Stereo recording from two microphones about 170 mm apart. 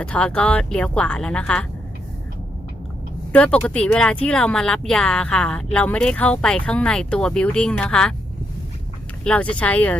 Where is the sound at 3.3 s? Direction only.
10° left (ahead or behind).